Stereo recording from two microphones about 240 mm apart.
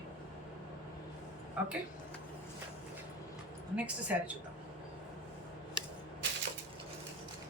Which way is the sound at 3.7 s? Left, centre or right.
Centre.